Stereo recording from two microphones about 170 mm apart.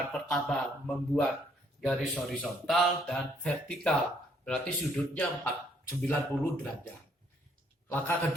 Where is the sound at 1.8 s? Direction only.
Centre (ahead or behind).